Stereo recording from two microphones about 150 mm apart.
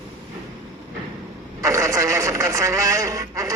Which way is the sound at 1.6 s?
20° right (ahead or behind).